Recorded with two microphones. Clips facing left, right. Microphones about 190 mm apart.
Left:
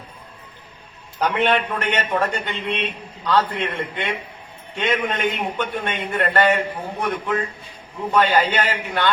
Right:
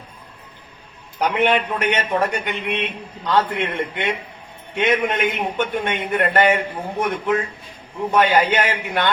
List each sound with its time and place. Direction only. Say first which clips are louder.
1.2 s a man's voice: right 1 dB; 15° right (ahead or behind)